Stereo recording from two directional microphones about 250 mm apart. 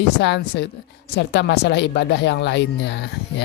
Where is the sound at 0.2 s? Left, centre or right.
Left.